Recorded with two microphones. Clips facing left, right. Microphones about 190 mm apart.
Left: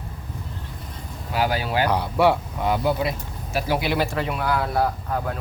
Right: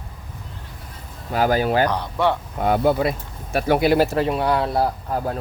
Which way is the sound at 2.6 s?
50° right (ahead or behind).